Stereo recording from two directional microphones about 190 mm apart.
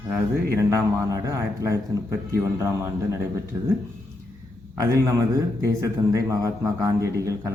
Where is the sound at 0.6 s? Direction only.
15° right (ahead or behind).